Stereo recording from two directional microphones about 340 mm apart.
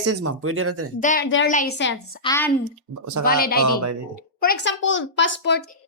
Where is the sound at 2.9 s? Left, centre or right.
Right.